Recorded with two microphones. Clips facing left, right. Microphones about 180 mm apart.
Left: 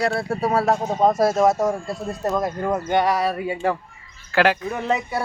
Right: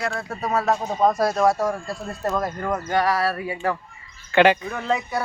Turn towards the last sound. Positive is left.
turn(degrees=20)  # may be behind; listen again after turning